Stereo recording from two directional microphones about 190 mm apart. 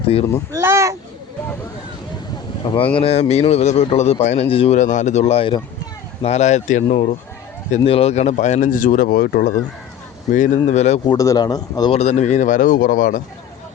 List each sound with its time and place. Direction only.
0.5 s speech: 15° right (ahead or behind)
2.6 s speech: 25° left (ahead or behind); by 9.5 s 55° left (ahead or behind)
10.3 s speech: 40° left (ahead or behind)
11.1 s speech: 20° left (ahead or behind)
11.9 s speech: 35° left (ahead or behind)